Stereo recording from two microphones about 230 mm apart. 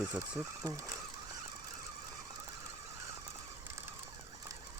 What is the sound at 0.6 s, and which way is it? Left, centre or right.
Speech, centre.